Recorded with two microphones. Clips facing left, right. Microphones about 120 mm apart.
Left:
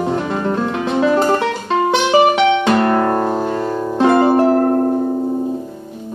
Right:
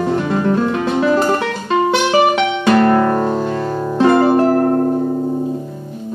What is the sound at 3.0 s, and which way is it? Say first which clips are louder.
Music: right 1 dB; 40° left (ahead or behind).